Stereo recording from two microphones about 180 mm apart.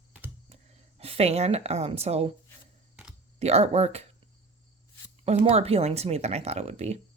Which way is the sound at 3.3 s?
35° right (ahead or behind).